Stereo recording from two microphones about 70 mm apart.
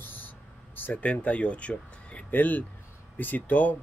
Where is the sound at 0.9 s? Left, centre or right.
Centre.